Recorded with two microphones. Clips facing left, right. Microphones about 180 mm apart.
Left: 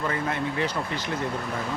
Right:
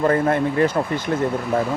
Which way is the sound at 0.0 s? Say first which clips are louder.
Right 10 dB; 50° right (ahead or behind).